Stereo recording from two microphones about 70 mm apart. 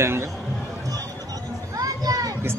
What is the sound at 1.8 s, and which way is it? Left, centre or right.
Children playing, right.